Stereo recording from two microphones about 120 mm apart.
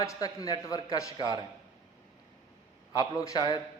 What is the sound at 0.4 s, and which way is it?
Speech, 30° left (ahead or behind).